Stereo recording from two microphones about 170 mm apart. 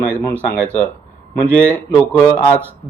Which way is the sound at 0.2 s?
10° left (ahead or behind).